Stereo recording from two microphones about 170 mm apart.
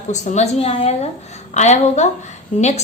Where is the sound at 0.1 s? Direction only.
45° left (ahead or behind).